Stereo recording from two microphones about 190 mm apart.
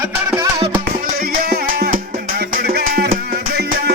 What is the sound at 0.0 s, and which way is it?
Music, 20° right (ahead or behind).